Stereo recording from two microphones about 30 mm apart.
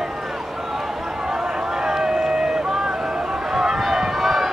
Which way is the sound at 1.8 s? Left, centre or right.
Right.